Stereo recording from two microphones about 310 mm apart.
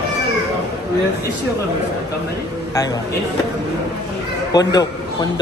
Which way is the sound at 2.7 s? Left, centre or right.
Centre.